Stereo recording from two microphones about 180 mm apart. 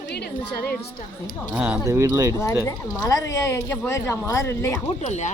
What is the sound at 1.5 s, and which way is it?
Speech, 10° right (ahead or behind).